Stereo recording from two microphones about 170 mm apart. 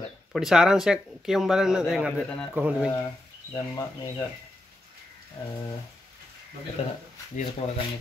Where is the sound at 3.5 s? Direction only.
20° left (ahead or behind).